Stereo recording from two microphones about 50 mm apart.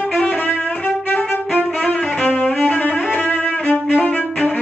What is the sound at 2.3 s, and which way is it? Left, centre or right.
Music, left.